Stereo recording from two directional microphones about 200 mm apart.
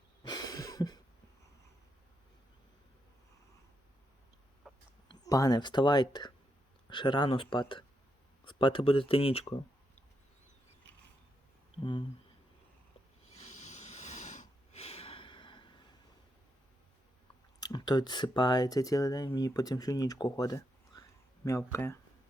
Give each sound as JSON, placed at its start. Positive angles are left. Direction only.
{"t": 0.2, "sound": "a sound", "side_deg": 20}
{"t": 4.7, "sound": "chicken", "side_deg": 0}
{"t": 5.0, "sound": "speech", "side_deg": 15}
{"t": 11.8, "sound": "a sound", "side_deg": 25}
{"t": 13.3, "sound": "snort", "side_deg": 35}
{"t": 17.6, "sound": "speech", "side_deg": 20}